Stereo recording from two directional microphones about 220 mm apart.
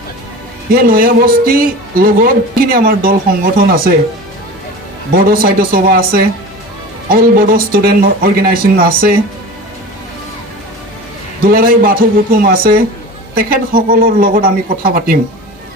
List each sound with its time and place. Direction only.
0.7 s speech: 40° right (ahead or behind)
5.1 s speech: 40° right (ahead or behind)
11.5 s speech: 40° right (ahead or behind)